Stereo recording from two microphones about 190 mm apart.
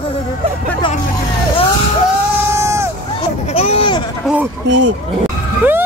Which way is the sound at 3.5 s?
30° left (ahead or behind).